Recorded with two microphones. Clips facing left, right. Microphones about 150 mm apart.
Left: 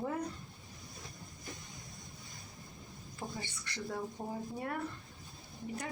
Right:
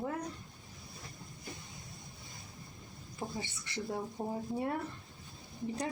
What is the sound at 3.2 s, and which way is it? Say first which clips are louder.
Speech: right 3 dB; 20° right (ahead or behind).